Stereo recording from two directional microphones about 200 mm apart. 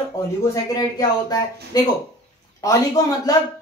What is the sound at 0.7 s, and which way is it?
Speech, 20° left (ahead or behind).